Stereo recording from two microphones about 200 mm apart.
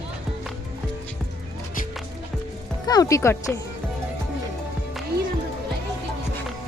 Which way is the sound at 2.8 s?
20° left (ahead or behind).